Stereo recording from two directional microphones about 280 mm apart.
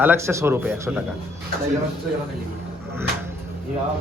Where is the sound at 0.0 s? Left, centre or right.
Centre.